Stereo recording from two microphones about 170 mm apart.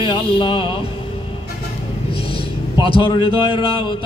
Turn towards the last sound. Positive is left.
turn(degrees=30)  # may be behind; listen again after turning